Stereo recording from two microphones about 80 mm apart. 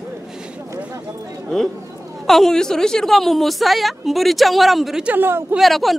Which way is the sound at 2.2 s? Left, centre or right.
Centre.